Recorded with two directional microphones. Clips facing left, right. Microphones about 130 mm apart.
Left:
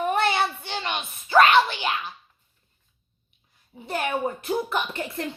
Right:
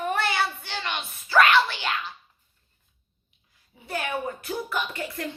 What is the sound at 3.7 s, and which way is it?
A woman's voice, 30° left (ahead or behind).